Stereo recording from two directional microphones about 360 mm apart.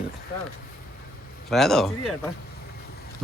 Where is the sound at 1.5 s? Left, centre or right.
Centre.